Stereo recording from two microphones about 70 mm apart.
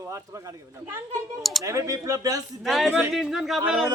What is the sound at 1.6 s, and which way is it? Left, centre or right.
Speech, right.